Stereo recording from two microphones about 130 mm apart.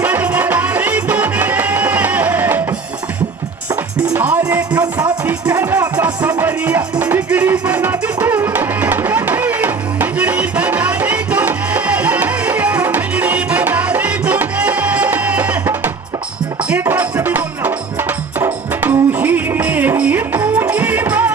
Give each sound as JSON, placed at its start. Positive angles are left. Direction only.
{"t": 0.0, "sound": "music", "side_deg": -10}
{"t": 4.0, "sound": "music", "side_deg": -10}
{"t": 4.8, "sound": "music", "side_deg": -25}